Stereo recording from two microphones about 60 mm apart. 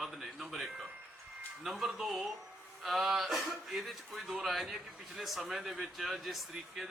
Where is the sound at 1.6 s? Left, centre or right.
Centre.